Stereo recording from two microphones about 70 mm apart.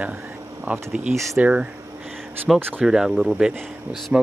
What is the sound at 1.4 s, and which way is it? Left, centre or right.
Speech, centre.